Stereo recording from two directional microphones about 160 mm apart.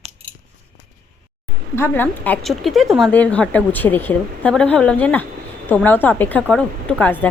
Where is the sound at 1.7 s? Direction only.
10° left (ahead or behind).